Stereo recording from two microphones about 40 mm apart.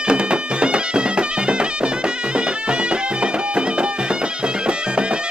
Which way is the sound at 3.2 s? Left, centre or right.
Right.